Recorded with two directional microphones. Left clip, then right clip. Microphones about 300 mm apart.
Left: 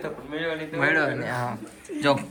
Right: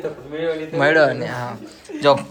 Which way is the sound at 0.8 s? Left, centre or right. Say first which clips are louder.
Right 8 dB; centre.